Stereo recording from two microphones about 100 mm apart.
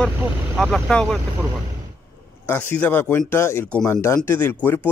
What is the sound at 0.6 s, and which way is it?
Speech, centre (ahead or behind).